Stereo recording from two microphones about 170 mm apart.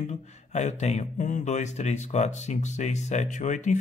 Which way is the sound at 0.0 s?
40° left (ahead or behind).